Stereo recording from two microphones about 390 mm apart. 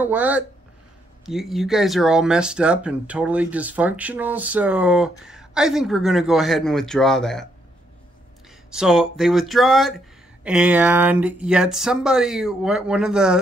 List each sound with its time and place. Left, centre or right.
0.0 s speech: centre
8.6 s speech: centre